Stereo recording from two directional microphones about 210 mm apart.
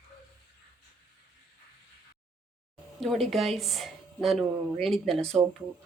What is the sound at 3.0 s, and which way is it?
Speech, centre (ahead or behind).